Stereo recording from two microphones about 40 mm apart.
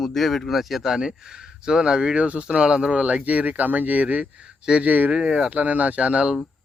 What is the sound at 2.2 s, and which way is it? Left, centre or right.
Speech, right.